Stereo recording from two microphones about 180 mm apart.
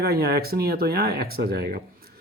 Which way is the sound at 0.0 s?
60° right (ahead or behind).